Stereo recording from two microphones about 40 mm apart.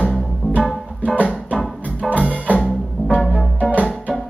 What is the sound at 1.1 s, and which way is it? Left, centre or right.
Music, right.